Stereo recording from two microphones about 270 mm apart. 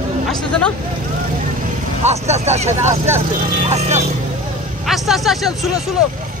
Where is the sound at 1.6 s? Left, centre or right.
Right.